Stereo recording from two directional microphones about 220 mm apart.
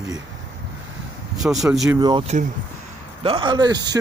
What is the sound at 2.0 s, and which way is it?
Speech, 20° right (ahead or behind).